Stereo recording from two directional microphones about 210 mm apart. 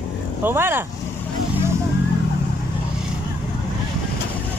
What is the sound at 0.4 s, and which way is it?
Speech, 10° right (ahead or behind).